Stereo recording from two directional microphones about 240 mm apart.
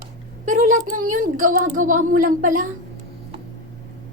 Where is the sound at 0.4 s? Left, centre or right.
Right.